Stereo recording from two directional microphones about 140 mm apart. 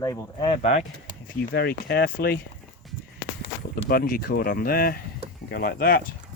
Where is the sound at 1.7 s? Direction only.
90° left.